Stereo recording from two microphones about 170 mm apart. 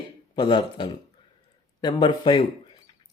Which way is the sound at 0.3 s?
25° left (ahead or behind).